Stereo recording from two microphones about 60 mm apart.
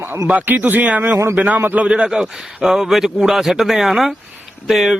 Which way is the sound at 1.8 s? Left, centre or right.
Centre.